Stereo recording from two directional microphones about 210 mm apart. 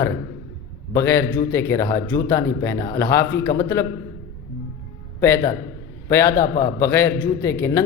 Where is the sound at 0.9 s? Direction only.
10° left (ahead or behind).